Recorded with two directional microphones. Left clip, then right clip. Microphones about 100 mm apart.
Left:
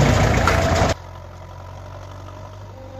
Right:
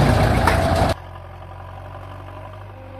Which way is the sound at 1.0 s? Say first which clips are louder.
Right 1 dB; 15° left (ahead or behind).